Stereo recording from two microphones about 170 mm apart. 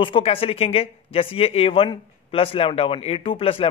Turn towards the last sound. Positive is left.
turn(degrees=30)  # may be behind; listen again after turning